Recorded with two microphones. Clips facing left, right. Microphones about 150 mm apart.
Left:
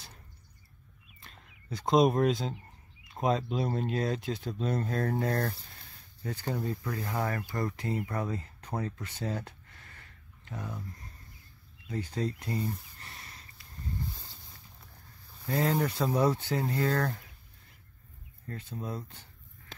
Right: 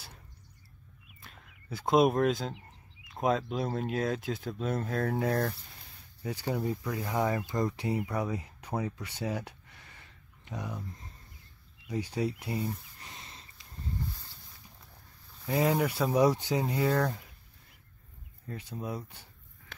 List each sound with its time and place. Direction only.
1.2 s speech: 5° right (ahead or behind)
11.9 s speech: 10° right (ahead or behind)
13.1 s a sound: 20° right (ahead or behind)
15.4 s speech: 5° right (ahead or behind)
18.5 s speech: 15° right (ahead or behind)